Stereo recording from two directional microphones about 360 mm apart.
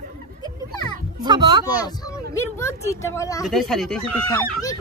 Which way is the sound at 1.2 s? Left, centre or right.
Centre.